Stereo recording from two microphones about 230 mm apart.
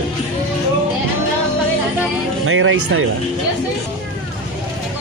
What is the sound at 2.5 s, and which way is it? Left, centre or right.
Speech, right.